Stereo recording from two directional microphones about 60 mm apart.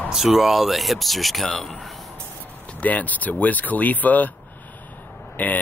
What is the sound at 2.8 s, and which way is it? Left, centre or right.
Speech, left.